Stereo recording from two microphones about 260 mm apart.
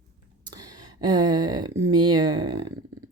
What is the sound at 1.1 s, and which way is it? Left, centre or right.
A woman's voice, centre.